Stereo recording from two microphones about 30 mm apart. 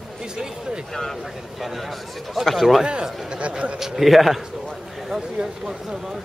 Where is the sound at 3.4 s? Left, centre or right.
Right.